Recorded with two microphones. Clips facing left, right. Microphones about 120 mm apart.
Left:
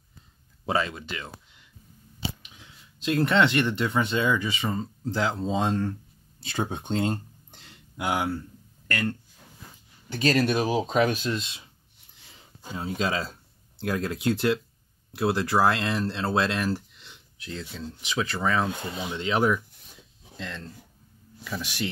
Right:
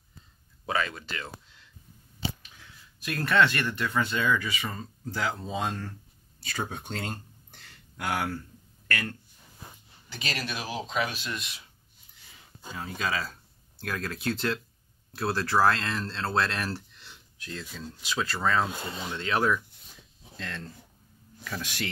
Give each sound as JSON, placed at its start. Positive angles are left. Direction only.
{"t": 0.7, "sound": "speech", "side_deg": 25}
{"t": 10.0, "sound": "speech", "side_deg": 45}
{"t": 11.3, "sound": "speech", "side_deg": 25}
{"t": 12.6, "sound": "speech", "side_deg": 20}
{"t": 21.5, "sound": "speech", "side_deg": 15}